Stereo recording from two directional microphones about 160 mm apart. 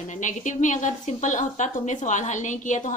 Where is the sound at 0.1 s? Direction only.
50° left (ahead or behind).